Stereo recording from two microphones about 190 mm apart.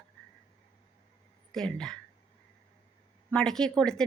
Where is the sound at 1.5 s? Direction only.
5° left (ahead or behind).